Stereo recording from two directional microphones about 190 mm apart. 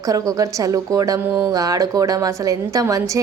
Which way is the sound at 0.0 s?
20° right (ahead or behind).